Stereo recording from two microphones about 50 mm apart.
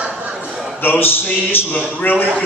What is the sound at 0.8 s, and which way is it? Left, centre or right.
A man's voice, left.